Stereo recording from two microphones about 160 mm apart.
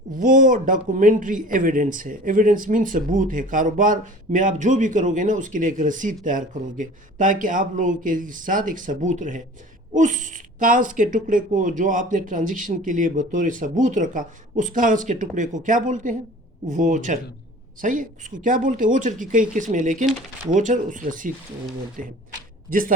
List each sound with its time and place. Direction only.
0.2 s speech: 55° right (ahead or behind)